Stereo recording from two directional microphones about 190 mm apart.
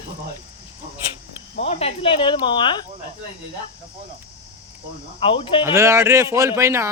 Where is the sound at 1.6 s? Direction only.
35° left (ahead or behind).